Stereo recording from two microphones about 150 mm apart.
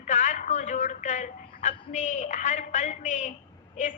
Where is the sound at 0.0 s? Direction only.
55° left (ahead or behind).